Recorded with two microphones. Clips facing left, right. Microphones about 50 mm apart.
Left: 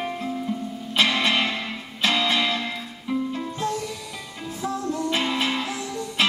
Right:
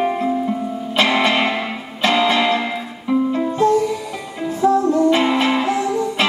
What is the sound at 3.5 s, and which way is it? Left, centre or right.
Music, centre.